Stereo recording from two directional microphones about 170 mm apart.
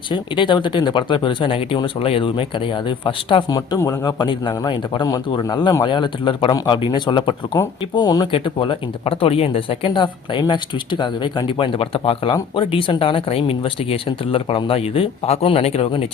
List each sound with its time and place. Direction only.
0.1 s speech: 30° left (ahead or behind)